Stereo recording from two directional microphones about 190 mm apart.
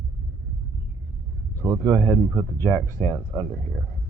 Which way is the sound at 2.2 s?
10° right (ahead or behind).